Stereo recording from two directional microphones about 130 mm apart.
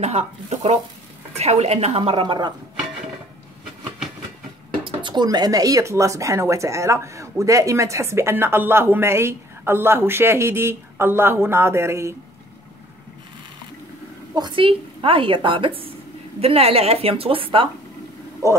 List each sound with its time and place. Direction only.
0.0 s a woman's voice: 55° right (ahead or behind); by 2.5 s 35° right (ahead or behind)
4.8 s speech: 35° right (ahead or behind)
14.3 s a woman's voice: 35° right (ahead or behind)
18.4 s speech: 25° right (ahead or behind)